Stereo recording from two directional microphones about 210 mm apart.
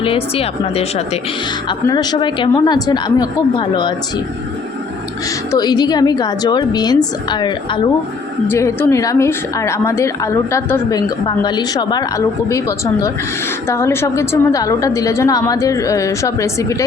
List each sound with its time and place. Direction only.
0.0 s a woman's voice: 25° left (ahead or behind)
5.5 s a woman's voice: 20° left (ahead or behind)